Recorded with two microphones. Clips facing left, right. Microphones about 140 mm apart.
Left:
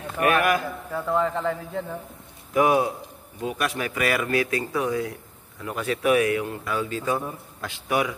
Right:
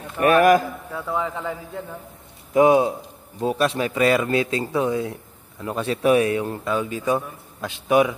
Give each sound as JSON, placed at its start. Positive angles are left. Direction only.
{"t": 0.2, "sound": "a man's voice", "side_deg": -35}
{"t": 0.9, "sound": "a man's voice", "side_deg": 0}
{"t": 2.5, "sound": "speech", "side_deg": -25}